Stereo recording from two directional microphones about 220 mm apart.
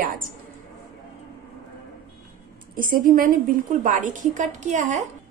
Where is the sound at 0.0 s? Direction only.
40° right (ahead or behind).